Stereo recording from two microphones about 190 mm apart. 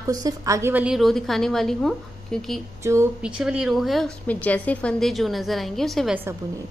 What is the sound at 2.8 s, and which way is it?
Speech, 15° right (ahead or behind).